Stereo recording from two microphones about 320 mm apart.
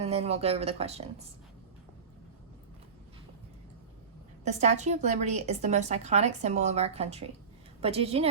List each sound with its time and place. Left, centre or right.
0.0 s a woman's voice: centre
4.4 s a woman's voice: right